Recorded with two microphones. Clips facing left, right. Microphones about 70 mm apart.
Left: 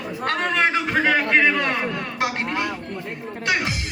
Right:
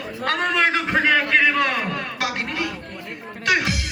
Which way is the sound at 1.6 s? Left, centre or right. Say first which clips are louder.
Right 1 dB; left.